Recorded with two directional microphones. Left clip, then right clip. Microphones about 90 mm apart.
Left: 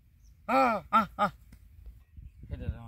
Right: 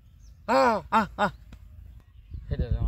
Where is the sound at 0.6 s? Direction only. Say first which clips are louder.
Right 3 dB; 25° right (ahead or behind).